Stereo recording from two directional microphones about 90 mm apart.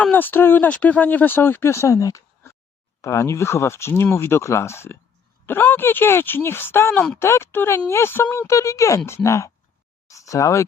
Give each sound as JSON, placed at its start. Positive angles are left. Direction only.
{"t": 0.0, "sound": "speech", "side_deg": 20}